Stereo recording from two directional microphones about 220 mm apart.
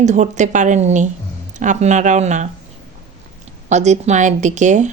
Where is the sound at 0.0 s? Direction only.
35° right (ahead or behind).